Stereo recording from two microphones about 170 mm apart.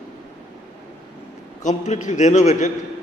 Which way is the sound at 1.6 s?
45° left (ahead or behind).